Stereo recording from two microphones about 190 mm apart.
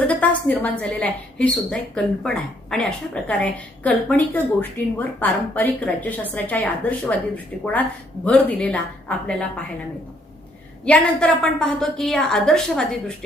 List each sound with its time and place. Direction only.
0.1 s a woman's voice: 10° left (ahead or behind)
10.8 s a woman's voice: 5° left (ahead or behind)